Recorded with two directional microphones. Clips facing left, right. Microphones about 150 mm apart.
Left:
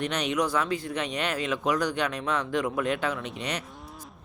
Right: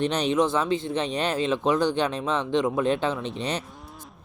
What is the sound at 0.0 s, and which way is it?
Speech, 30° right (ahead or behind).